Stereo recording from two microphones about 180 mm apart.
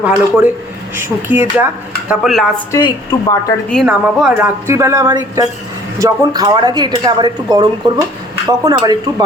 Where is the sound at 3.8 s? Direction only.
5° right (ahead or behind).